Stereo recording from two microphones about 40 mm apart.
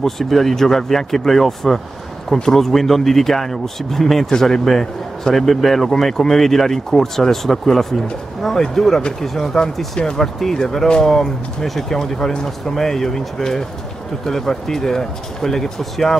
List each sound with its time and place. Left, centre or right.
0.0 s a man's voice: centre
11.1 s a man's voice: centre